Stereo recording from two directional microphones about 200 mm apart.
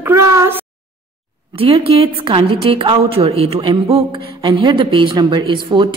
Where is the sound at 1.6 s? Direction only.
30° right (ahead or behind).